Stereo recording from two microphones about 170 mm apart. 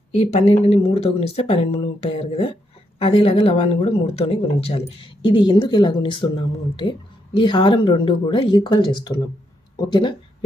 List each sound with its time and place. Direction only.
0.1 s speech: 35° left (ahead or behind)